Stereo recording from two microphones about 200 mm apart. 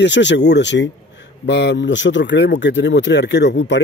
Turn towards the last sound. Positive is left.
turn(degrees=60)  # may be behind; listen again after turning